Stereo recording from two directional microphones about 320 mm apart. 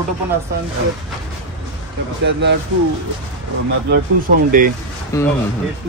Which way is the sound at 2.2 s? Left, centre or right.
Right.